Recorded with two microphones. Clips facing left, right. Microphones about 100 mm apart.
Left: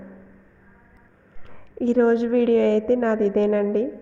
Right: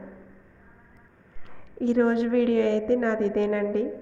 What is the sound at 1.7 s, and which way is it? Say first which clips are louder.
A woman's voice: left 4 dB; 35° left (ahead or behind).